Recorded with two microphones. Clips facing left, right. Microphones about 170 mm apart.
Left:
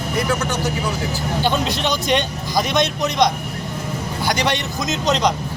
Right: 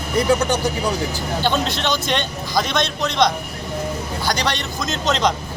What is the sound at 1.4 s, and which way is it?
A man's voice, 10° left (ahead or behind).